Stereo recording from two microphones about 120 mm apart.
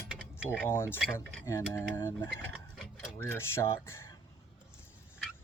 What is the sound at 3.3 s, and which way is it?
Speech, 20° left (ahead or behind).